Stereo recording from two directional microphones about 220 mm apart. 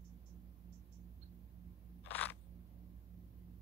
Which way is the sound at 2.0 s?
10° left (ahead or behind).